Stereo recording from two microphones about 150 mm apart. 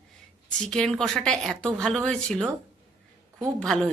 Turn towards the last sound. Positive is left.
turn(degrees=5)  # may be behind; listen again after turning